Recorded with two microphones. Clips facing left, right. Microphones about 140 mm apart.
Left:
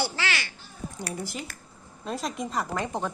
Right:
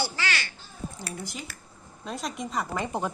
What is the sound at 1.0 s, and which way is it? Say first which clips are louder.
Speech: left 3 dB; 5° left (ahead or behind).